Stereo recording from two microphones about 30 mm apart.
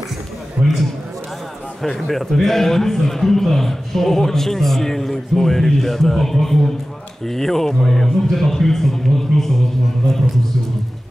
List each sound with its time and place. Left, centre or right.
0.6 s a man's voice: right
2.0 s a man's voice: centre